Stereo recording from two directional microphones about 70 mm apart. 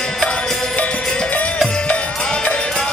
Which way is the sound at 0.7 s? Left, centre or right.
Centre.